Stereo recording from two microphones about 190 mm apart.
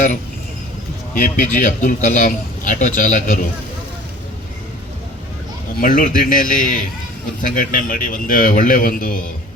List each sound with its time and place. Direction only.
1.1 s a man's voice: 45° left (ahead or behind)
5.8 s a man's voice: 45° left (ahead or behind)